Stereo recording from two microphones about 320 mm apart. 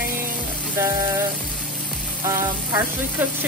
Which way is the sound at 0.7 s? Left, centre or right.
Centre.